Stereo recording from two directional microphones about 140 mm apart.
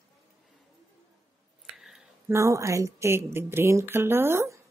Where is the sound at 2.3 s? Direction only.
20° right (ahead or behind).